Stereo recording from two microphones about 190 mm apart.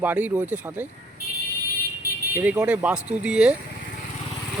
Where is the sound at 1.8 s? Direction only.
50° right (ahead or behind).